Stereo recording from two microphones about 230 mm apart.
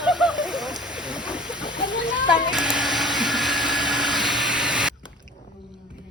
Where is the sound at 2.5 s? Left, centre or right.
Centre.